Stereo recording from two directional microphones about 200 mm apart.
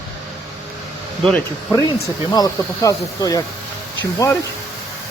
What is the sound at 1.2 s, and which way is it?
Speech, 5° left (ahead or behind).